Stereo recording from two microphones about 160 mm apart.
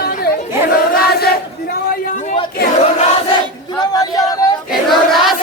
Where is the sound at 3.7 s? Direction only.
25° left (ahead or behind).